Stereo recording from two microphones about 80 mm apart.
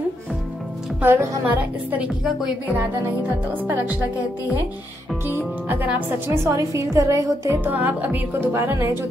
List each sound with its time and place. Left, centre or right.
1.0 s speech: right
5.2 s speech: right
7.6 s speech: right